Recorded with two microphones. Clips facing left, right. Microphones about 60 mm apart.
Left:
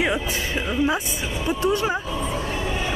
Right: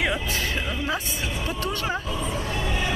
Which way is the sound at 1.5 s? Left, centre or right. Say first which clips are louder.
Left 8 dB; centre.